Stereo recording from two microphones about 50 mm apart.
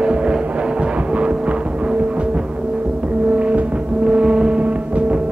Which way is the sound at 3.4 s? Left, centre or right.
Right.